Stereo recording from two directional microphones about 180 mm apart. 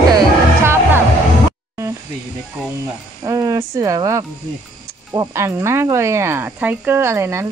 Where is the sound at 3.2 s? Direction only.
20° right (ahead or behind).